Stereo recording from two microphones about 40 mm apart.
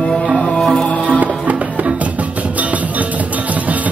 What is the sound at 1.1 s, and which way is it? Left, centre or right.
Music, right.